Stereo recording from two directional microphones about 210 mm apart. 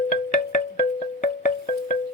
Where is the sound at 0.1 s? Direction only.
35° left (ahead or behind).